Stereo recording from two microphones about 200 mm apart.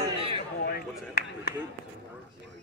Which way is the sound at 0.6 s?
50° left (ahead or behind).